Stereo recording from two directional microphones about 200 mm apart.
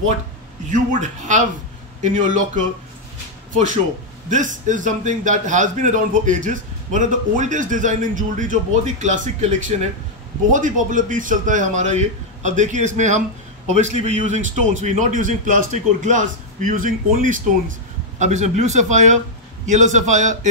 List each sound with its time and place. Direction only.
0.7 s a man's voice: 40° right (ahead or behind)
4.3 s a man's voice: 40° right (ahead or behind)